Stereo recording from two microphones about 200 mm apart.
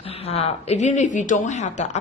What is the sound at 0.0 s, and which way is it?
A woman's voice, 30° left (ahead or behind).